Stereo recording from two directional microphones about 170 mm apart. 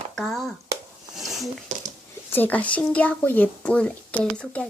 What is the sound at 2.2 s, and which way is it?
A woman's voice, 10° left (ahead or behind).